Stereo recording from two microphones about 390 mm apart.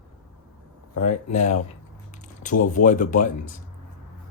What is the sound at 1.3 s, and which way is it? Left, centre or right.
Speech, centre.